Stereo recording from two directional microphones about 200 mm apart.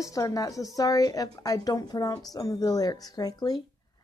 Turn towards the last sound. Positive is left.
turn(degrees=20)  # may be behind; listen again after turning